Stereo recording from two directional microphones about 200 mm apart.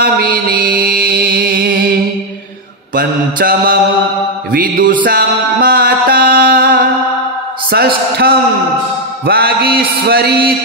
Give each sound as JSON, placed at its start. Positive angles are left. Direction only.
{"t": 0.0, "sound": "mantra", "side_deg": -45}
{"t": 3.0, "sound": "mantra", "side_deg": -45}
{"t": 5.0, "sound": "music", "side_deg": -50}
{"t": 7.7, "sound": "a sound", "side_deg": -50}
{"t": 9.2, "sound": "music", "side_deg": -50}